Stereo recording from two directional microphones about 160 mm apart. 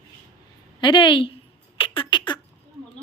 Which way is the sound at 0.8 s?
30° left (ahead or behind).